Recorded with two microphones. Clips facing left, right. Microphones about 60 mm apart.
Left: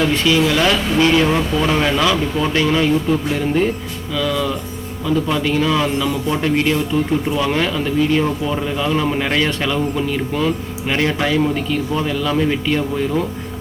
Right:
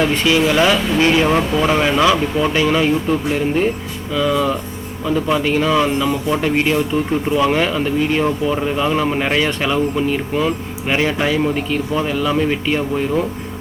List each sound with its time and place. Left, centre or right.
0.0 s speech: right
0.6 s speech: centre
4.1 s speech: right